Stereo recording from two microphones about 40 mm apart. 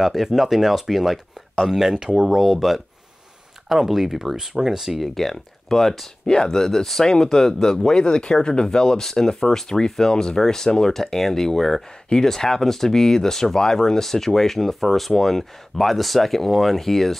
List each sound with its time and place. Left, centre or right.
0.0 s speech: centre
1.9 s speech: centre
2.1 s speech: centre
5.0 s speech: centre
6.2 s speech: centre